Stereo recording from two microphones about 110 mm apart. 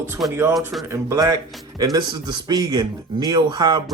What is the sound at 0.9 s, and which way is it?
Speech, 35° right (ahead or behind).